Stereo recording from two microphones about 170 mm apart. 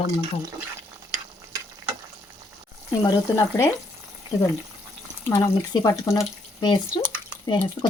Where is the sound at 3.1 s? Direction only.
20° left (ahead or behind).